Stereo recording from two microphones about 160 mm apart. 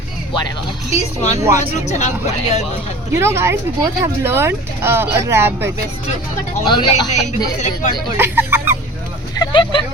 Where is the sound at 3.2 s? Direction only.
15° right (ahead or behind).